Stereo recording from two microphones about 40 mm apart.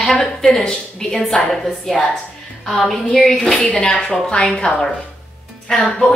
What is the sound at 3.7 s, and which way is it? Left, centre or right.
A woman's voice, left.